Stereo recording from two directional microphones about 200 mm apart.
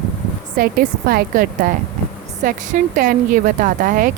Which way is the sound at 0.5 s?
45° right (ahead or behind).